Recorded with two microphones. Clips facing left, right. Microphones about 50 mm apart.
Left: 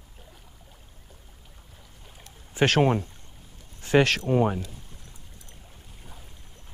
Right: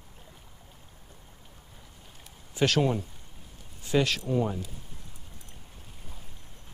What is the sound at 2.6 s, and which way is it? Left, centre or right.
Speech, left.